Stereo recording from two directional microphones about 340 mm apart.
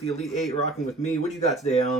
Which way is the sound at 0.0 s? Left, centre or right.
Centre.